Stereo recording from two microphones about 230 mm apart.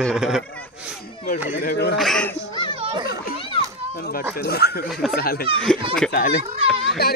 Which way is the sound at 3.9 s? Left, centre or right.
Left.